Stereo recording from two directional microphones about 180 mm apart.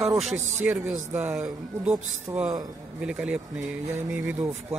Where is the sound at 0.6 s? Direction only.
10° right (ahead or behind).